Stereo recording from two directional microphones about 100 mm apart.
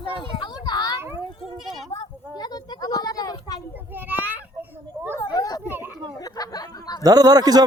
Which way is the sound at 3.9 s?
20° right (ahead or behind).